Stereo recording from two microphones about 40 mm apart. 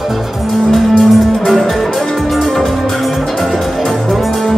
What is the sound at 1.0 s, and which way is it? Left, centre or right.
Music, centre.